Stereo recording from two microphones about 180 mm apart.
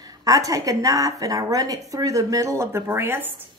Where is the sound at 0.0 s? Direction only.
20° right (ahead or behind).